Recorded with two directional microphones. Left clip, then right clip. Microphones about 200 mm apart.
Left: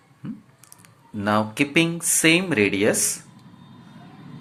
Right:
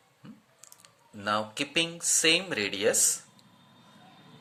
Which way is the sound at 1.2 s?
15° right (ahead or behind).